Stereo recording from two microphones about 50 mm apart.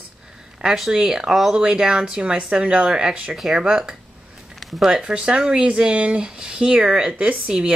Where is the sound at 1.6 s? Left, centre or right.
Centre.